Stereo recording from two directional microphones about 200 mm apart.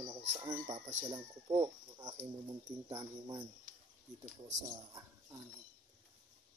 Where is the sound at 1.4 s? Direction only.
15° right (ahead or behind).